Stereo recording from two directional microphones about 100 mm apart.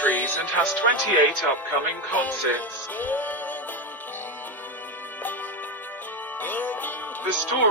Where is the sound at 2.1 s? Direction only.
15° left (ahead or behind).